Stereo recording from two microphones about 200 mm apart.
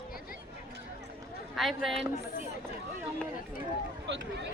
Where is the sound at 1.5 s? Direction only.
Centre (ahead or behind).